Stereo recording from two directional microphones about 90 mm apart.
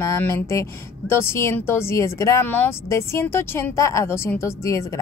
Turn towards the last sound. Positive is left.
turn(degrees=35)  # may be behind; listen again after turning